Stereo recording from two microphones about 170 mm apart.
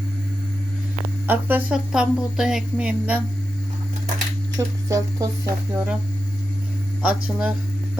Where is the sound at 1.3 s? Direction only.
10° right (ahead or behind).